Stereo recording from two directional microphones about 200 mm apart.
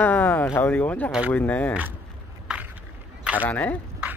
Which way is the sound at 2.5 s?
5° right (ahead or behind).